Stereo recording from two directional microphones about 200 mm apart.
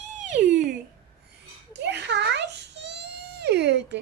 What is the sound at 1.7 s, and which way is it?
Baby cry, 60° right (ahead or behind).